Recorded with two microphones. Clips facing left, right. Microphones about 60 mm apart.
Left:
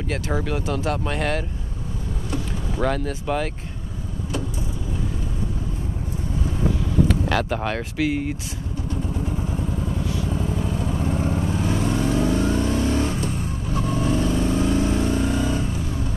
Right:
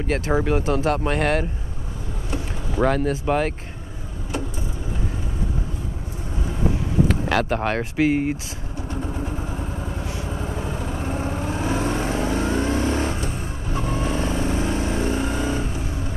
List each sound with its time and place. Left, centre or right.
0.3 s speech: centre
0.7 s speech: centre
2.8 s speech: centre
7.1 s speech: centre
8.1 s speech: right
9.8 s vehicle: right